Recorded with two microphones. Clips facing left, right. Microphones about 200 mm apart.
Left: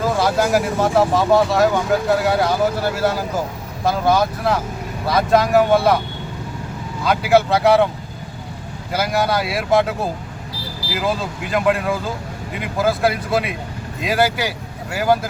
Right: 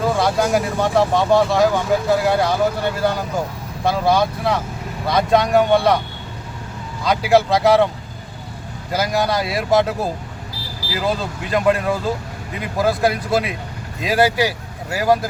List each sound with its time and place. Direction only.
0.0 s speech: 5° left (ahead or behind)
7.0 s speech: 5° left (ahead or behind)
8.9 s speech: 5° left (ahead or behind)